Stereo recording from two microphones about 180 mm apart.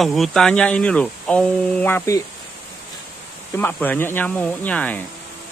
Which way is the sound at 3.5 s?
10° left (ahead or behind).